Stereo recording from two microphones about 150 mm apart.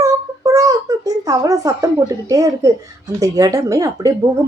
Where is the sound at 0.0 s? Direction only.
25° right (ahead or behind).